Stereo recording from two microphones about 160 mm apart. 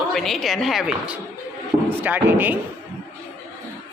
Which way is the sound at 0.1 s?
Centre (ahead or behind).